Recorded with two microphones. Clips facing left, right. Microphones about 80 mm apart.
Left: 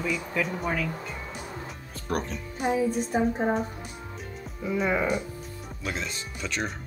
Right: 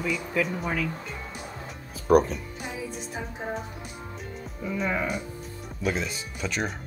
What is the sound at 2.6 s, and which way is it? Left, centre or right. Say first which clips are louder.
Music: left 15 dB; left.